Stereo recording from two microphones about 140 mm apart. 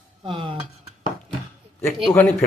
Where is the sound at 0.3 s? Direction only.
35° right (ahead or behind).